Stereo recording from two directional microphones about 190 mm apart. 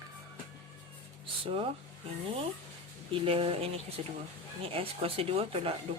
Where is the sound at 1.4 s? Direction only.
30° right (ahead or behind).